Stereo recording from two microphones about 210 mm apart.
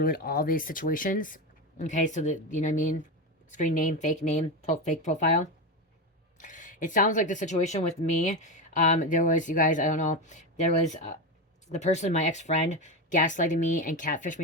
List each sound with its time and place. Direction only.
0.0 s speech: 45° left (ahead or behind)